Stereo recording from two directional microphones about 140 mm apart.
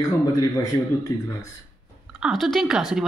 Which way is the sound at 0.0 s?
25° left (ahead or behind).